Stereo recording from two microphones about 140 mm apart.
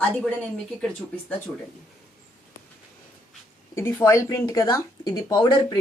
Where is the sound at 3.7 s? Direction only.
15° left (ahead or behind).